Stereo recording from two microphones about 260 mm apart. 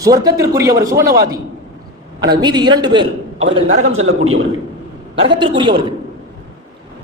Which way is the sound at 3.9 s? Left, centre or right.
Right.